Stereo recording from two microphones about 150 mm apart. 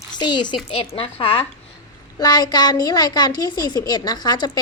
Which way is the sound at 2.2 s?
25° left (ahead or behind).